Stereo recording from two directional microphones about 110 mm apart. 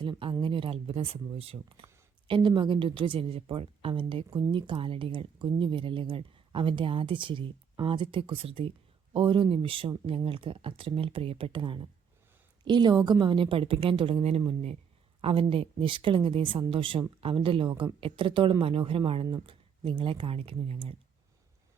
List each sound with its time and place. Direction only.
0.0 s speech: 45° right (ahead or behind); by 14.8 s 65° right (ahead or behind)
15.2 s speech: 55° right (ahead or behind)